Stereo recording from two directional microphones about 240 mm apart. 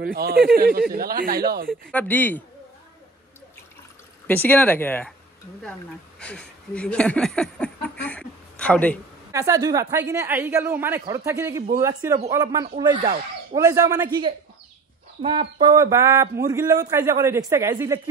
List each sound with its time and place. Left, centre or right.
0.0 s speech: right
1.7 s speech: centre
4.3 s speech: centre
6.1 s a sound: centre
9.3 s a man's voice: centre
15.6 s a man's voice: centre